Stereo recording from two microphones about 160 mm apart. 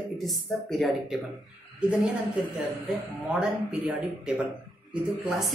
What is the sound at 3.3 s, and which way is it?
A woman's voice, 5° right (ahead or behind).